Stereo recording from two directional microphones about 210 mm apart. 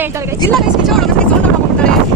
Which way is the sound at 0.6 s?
Centre (ahead or behind).